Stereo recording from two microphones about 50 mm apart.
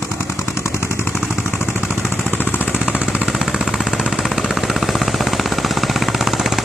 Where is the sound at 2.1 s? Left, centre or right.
Left.